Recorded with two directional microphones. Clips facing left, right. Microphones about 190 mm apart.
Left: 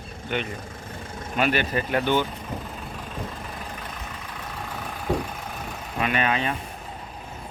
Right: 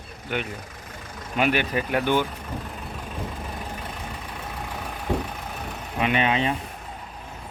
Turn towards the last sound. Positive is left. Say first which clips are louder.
# right 2 dB
turn(degrees=-25)  # may be behind; listen again after turning